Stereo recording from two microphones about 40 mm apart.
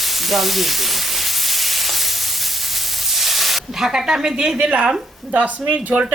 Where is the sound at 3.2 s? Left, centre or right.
Centre.